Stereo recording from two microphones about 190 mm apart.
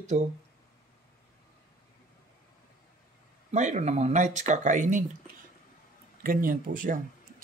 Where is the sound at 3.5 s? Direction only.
40° right (ahead or behind).